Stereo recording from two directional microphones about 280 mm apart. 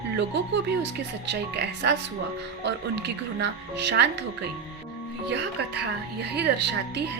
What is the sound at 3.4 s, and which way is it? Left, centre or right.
Speech, right.